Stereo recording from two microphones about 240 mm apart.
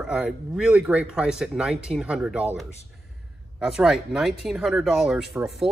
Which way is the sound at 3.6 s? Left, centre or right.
Centre.